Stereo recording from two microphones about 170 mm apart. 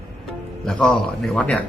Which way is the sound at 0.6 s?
5° left (ahead or behind).